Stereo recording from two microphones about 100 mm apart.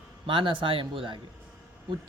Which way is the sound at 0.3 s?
60° right (ahead or behind).